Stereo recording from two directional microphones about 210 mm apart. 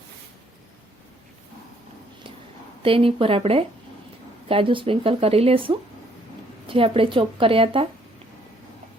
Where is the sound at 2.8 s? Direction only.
25° right (ahead or behind).